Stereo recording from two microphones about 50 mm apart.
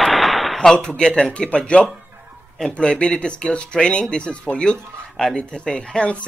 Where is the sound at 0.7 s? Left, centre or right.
Centre.